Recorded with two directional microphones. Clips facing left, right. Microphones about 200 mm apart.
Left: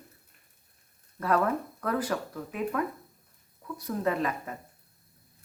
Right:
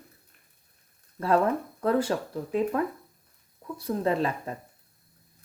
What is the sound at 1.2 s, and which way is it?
Speech, 30° right (ahead or behind).